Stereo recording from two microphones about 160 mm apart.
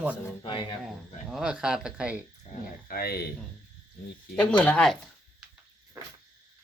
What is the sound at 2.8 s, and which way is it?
Speech, 75° left (ahead or behind).